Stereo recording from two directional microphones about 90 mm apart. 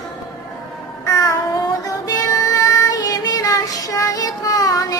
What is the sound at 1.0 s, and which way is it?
Child singing, 35° left (ahead or behind).